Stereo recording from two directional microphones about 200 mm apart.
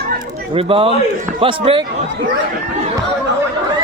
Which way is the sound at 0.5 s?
30° right (ahead or behind).